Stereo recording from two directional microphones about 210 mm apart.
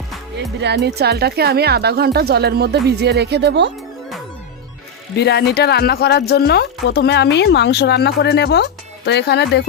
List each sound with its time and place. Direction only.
0.6 s speech: 55° right (ahead or behind)
5.1 s speech: 50° left (ahead or behind)